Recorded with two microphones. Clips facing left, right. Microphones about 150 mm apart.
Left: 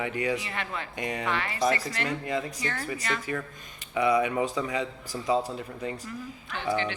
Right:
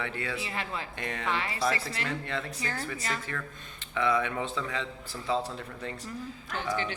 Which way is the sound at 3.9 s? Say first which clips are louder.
Left 4 dB; 15° left (ahead or behind).